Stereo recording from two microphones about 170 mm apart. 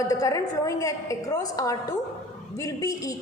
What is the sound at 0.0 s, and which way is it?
A woman's voice, 20° left (ahead or behind).